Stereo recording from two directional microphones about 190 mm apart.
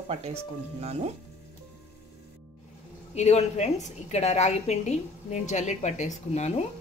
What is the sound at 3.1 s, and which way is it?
A woman's voice, 35° left (ahead or behind).